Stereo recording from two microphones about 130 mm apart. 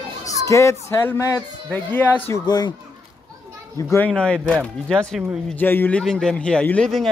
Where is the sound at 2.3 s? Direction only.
30° left (ahead or behind).